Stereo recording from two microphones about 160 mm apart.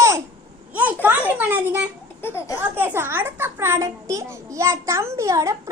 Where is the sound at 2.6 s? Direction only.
15° right (ahead or behind).